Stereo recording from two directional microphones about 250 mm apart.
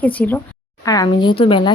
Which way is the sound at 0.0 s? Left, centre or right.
Centre.